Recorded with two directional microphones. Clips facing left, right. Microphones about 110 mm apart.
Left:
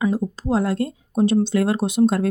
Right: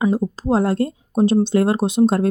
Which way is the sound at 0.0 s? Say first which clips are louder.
Right 3 dB; 25° right (ahead or behind).